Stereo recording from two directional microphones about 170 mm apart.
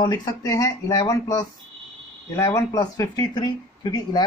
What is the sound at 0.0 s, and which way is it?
Speech, 25° left (ahead or behind).